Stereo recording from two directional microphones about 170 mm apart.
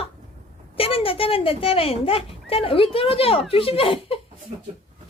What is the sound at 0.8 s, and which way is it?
Speech, 35° left (ahead or behind).